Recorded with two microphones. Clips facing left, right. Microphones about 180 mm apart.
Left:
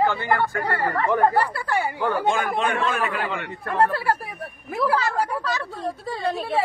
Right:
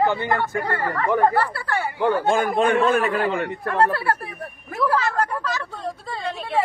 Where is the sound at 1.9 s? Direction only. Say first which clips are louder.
Right 4 dB; 20° right (ahead or behind).